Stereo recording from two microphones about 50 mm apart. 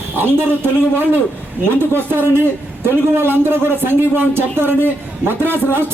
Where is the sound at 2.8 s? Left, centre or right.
Right.